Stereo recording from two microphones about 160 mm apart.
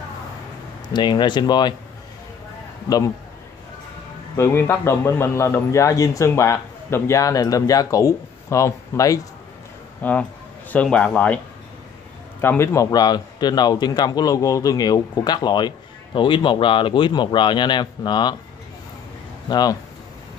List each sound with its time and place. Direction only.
0.8 s a man's voice: 30° left (ahead or behind)
4.4 s a man's voice: 15° left (ahead or behind)
12.4 s a man's voice: 15° left (ahead or behind)
19.5 s a man's voice: 25° left (ahead or behind)